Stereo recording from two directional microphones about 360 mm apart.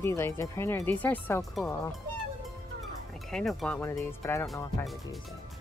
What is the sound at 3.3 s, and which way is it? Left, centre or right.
Speech, centre.